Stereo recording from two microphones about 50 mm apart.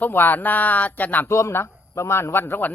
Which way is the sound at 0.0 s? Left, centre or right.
Left.